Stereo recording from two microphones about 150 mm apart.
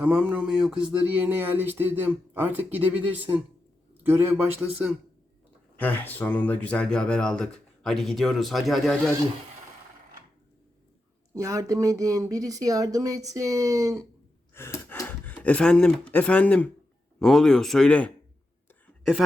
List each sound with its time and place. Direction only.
0.0 s speech: 10° right (ahead or behind)
5.8 s speech: 10° left (ahead or behind)
11.3 s speech: 20° right (ahead or behind)
14.5 s speech: 15° left (ahead or behind)